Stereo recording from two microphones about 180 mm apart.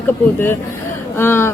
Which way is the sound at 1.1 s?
10° left (ahead or behind).